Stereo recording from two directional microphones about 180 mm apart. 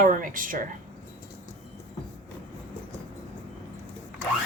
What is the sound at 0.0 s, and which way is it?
Speech, 45° right (ahead or behind).